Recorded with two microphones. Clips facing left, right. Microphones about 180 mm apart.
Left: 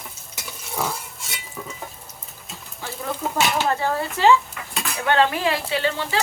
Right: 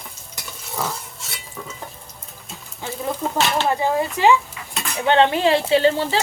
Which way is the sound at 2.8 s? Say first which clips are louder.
Right 4 dB; 20° right (ahead or behind).